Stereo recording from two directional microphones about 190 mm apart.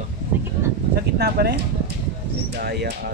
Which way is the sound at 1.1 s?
55° right (ahead or behind).